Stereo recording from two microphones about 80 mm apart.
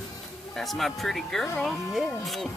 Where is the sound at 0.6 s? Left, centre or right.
Centre.